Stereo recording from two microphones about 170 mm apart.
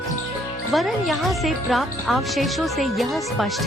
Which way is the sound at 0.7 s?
Centre (ahead or behind).